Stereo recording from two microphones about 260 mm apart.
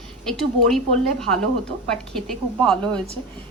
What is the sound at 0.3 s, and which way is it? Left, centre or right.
A woman's voice, centre.